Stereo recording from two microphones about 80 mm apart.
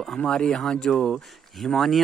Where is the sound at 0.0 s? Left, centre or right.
Centre.